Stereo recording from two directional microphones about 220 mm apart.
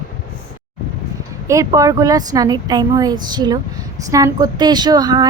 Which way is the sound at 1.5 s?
15° right (ahead or behind).